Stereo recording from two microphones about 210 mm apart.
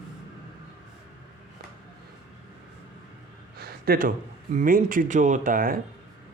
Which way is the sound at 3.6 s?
45° right (ahead or behind).